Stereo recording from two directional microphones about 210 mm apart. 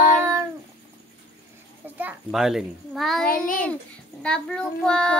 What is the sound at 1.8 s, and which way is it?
A child's voice, 10° right (ahead or behind).